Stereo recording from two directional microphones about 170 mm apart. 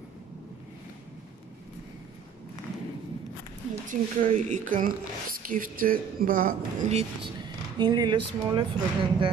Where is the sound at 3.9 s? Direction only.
45° right (ahead or behind).